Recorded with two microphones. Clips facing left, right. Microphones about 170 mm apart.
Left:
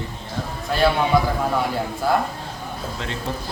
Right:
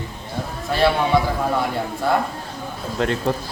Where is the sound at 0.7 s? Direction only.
Centre (ahead or behind).